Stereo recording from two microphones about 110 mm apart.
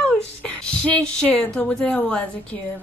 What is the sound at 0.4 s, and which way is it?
A woman's voice, 10° left (ahead or behind).